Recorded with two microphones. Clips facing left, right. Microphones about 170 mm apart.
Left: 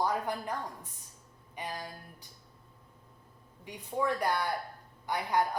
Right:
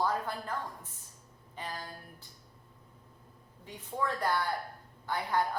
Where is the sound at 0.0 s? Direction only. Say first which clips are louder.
Left 1 dB; 15° left (ahead or behind).